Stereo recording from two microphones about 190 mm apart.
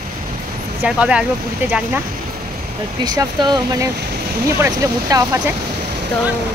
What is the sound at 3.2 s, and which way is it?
Speech, 20° right (ahead or behind).